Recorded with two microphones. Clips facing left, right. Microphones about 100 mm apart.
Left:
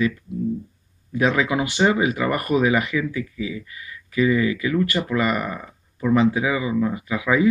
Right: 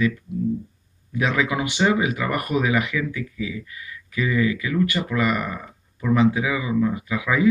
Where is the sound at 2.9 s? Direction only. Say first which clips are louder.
Left 2 dB; 20° left (ahead or behind).